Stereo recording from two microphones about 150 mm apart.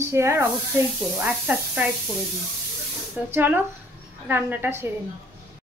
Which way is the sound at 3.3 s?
15° right (ahead or behind).